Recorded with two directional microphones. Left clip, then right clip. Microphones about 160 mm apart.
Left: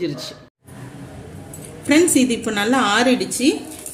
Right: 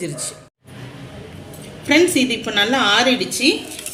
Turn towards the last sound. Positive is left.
turn(degrees=65)  # may be behind; listen again after turning